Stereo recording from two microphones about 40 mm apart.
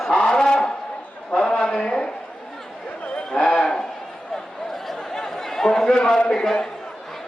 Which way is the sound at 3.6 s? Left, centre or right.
Centre.